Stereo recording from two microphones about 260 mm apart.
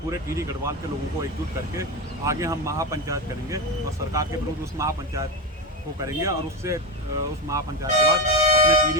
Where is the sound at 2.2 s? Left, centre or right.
Centre.